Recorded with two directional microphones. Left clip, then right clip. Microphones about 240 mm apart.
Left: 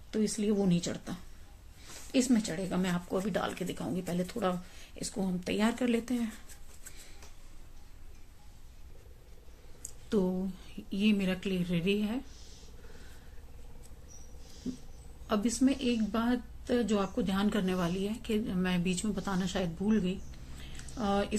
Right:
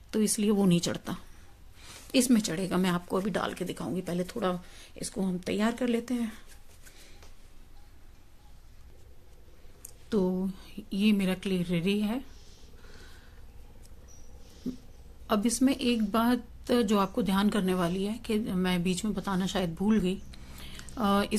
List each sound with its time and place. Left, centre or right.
0.1 s a woman's voice: right; by 6.4 s centre
9.8 s speech: centre
15.2 s a woman's voice: right